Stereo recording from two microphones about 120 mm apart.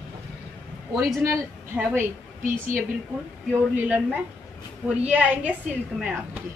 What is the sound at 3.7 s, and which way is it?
A woman's voice, 15° right (ahead or behind).